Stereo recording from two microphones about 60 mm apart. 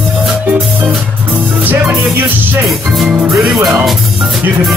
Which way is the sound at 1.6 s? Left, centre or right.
Right.